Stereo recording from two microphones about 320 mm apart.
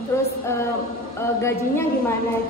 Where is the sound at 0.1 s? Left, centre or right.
Centre.